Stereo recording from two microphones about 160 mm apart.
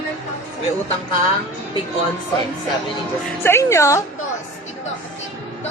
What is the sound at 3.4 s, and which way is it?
Speech, 15° left (ahead or behind).